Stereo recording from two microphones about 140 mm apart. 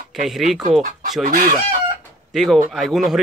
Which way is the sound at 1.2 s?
70° right (ahead or behind).